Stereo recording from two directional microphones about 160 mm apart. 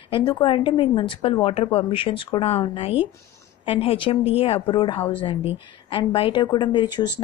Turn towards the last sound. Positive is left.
turn(degrees=30)  # may be behind; listen again after turning